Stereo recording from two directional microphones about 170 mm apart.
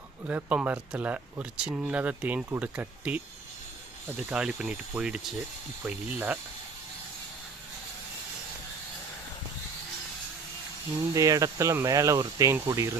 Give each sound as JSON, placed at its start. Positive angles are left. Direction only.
{"t": 0.3, "sound": "speech", "side_deg": -10}
{"t": 4.2, "sound": "speech", "side_deg": -5}
{"t": 11.1, "sound": "speech", "side_deg": -20}